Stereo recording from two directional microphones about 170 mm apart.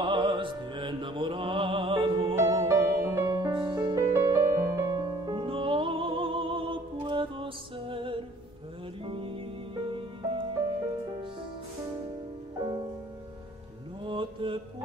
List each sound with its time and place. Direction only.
0.0 s music: 30° right (ahead or behind)
2.3 s music: 15° right (ahead or behind)
14.0 s mantra: 30° right (ahead or behind)